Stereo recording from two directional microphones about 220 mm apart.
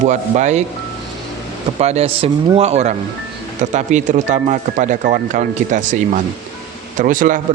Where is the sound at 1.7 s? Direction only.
30° right (ahead or behind).